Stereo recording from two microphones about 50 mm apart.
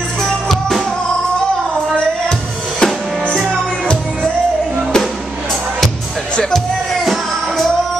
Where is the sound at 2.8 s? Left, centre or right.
Centre.